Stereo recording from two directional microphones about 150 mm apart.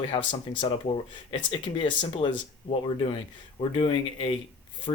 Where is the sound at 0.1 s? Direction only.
35° left (ahead or behind).